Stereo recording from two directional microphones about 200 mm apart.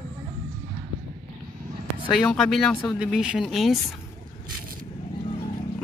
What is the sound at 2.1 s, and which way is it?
Speech, centre (ahead or behind).